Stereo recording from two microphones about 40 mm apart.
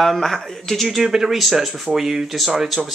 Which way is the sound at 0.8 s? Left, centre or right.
Centre.